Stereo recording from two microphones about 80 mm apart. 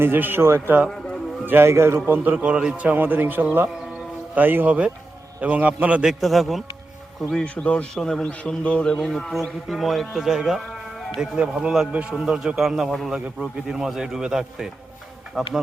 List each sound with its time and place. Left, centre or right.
0.0 s a man's voice: right
2.0 s a man's voice: right
6.1 s a man's voice: centre
7.4 s a man's voice: centre